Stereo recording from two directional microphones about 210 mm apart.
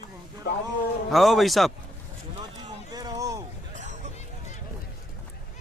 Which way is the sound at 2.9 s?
20° right (ahead or behind).